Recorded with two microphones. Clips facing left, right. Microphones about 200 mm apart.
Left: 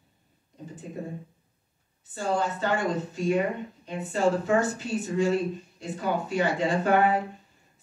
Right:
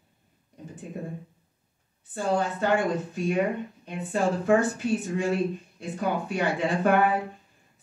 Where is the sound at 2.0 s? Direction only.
55° right (ahead or behind).